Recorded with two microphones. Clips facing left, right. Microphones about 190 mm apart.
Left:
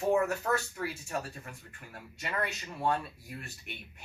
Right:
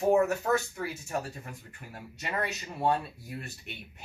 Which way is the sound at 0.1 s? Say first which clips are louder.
Right 3 dB; 20° right (ahead or behind).